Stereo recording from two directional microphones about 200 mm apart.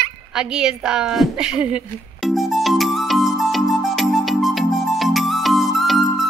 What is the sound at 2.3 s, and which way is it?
Music, centre (ahead or behind).